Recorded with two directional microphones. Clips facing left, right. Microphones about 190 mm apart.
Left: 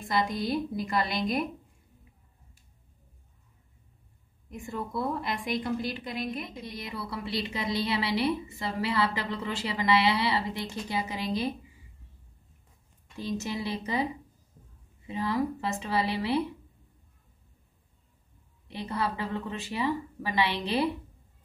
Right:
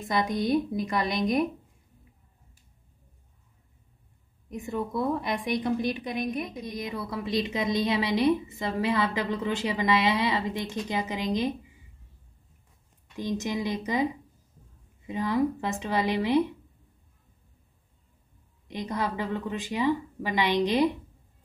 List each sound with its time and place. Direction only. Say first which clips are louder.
0.0 s a woman's voice: right 2 dB; 20° right (ahead or behind)
4.5 s a woman's voice: right 5 dB; 20° right (ahead or behind)
13.4 s a woman's voice: right 3 dB; 15° right (ahead or behind)
15.0 s a woman's voice: right 3 dB; 15° right (ahead or behind)
18.7 s a woman's voice: right 1 dB; 15° right (ahead or behind)